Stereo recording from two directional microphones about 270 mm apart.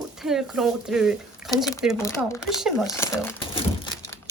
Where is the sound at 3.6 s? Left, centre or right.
Centre.